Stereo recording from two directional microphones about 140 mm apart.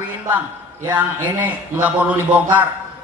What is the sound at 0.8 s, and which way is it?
A man's voice, 15° right (ahead or behind).